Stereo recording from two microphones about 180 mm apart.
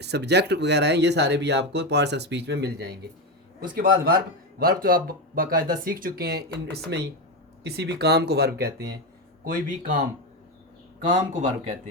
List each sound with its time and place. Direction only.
0.0 s speech: 70° right (ahead or behind)
3.8 s speech: 55° right (ahead or behind)
7.6 s speech: 65° right (ahead or behind)
9.4 s speech: 50° right (ahead or behind)
11.1 s speech: 40° right (ahead or behind)